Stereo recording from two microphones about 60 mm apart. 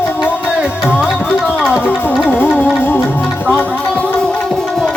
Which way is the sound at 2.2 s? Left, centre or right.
Left.